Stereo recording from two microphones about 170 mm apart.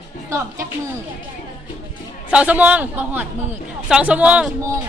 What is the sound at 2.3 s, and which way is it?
A man's voice, 10° right (ahead or behind).